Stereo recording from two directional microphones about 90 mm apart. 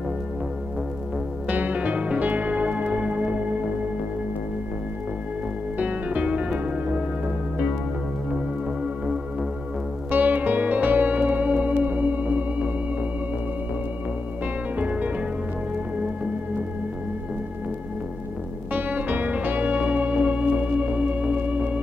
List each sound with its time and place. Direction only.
1.5 s music: 20° right (ahead or behind)
5.8 s music: 15° right (ahead or behind)
10.1 s music: 20° right (ahead or behind)
14.4 s music: 15° right (ahead or behind)
18.7 s music: 20° right (ahead or behind)